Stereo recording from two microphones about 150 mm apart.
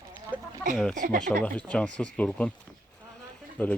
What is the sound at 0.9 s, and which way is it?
Speech, 60° right (ahead or behind).